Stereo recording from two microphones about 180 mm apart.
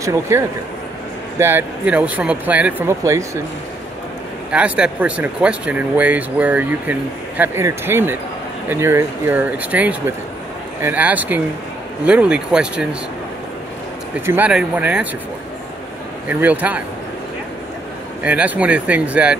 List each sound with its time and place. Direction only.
0.0 s speech: 15° right (ahead or behind)
4.5 s speech: 5° right (ahead or behind)
14.2 s speech: 10° right (ahead or behind)
16.3 s speech: 10° right (ahead or behind)
18.2 s speech: 10° right (ahead or behind)